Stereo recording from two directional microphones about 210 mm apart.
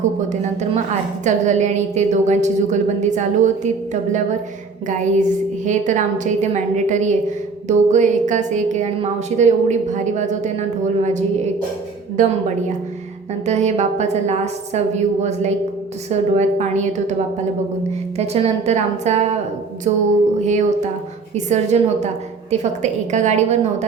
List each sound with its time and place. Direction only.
1.2 s a woman's voice: 35° right (ahead or behind)
4.9 s a woman's voice: 35° right (ahead or behind)
12.2 s a woman's voice: 40° right (ahead or behind)
13.4 s a woman's voice: 35° right (ahead or behind)
20.4 s a woman's voice: 35° right (ahead or behind)